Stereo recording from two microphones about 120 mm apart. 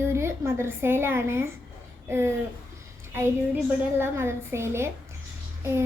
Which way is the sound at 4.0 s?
20° right (ahead or behind).